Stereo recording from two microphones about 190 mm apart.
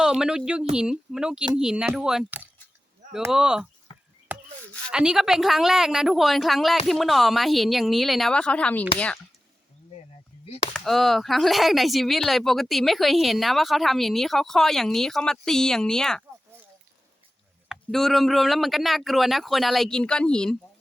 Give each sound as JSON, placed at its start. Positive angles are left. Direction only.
{"t": 0.0, "sound": "speech", "side_deg": -5}
{"t": 3.9, "sound": "a sound", "side_deg": 25}
{"t": 4.3, "sound": "a sound", "side_deg": -10}
{"t": 4.9, "sound": "speech", "side_deg": -5}
{"t": 10.4, "sound": "speech", "side_deg": 30}
{"t": 10.8, "sound": "speech", "side_deg": 0}
{"t": 17.7, "sound": "speech", "side_deg": 0}